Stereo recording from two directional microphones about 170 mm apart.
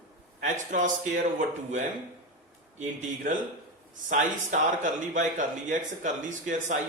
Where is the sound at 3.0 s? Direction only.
50° right (ahead or behind).